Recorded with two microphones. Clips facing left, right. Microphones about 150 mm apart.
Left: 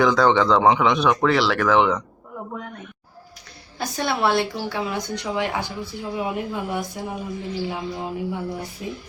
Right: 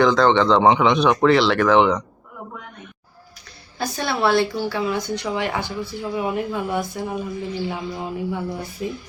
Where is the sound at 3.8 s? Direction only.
20° left (ahead or behind).